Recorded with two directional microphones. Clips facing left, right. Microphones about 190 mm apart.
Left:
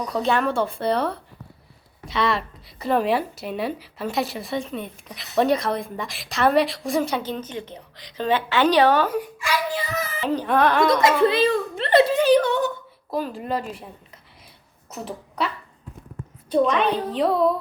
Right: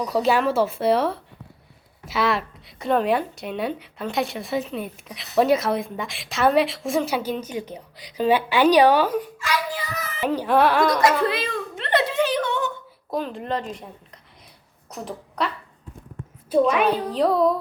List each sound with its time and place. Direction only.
0.0 s speech: 5° right (ahead or behind)
9.1 s a child's voice: 10° left (ahead or behind)
10.2 s speech: 10° right (ahead or behind)
11.0 s a sound: 30° left (ahead or behind)
13.1 s speech: 5° left (ahead or behind)
14.8 s a woman's voice: 5° left (ahead or behind)